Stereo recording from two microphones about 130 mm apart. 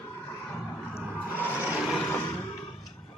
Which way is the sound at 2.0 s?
15° left (ahead or behind).